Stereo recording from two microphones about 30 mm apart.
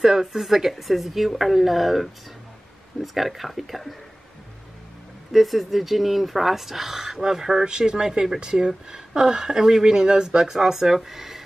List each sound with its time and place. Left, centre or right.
0.0 s a woman's voice: centre
5.3 s speech: centre
7.6 s speech: right; by 11.4 s centre